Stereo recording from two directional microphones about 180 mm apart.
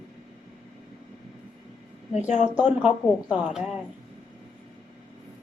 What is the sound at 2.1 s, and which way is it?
Speech, 40° left (ahead or behind).